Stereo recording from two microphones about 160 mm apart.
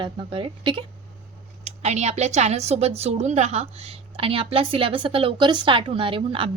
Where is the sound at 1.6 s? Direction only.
45° right (ahead or behind).